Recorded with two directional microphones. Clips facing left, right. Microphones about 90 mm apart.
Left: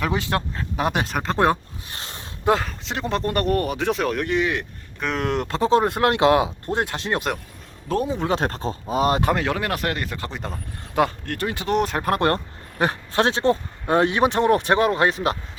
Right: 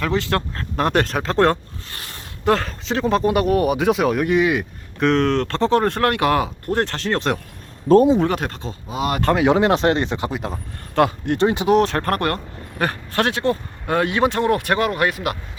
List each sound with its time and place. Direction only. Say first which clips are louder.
0.0 s speech: right 3 dB; 20° left (ahead or behind)
0.5 s speech: right 4 dB; 5° left (ahead or behind)
2.0 s a sound: left 3 dB; 20° left (ahead or behind)
2.6 s speech: right 5 dB; centre (ahead or behind)
8.3 s speech: left 1 dB; 35° left (ahead or behind)
9.4 s speech: right 8 dB; 20° right (ahead or behind)
10.3 s speech: right 5 dB; 5° right (ahead or behind)
11.3 s speech: right 9 dB; 20° right (ahead or behind)
11.7 s speech: even; 5° left (ahead or behind); by 15.4 s 30° left (ahead or behind)